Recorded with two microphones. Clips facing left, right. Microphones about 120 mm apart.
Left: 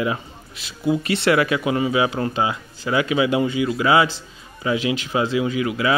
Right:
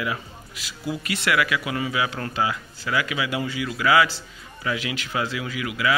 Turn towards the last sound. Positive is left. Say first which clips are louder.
# left 4 dB
turn(degrees=30)  # may be behind; listen again after turning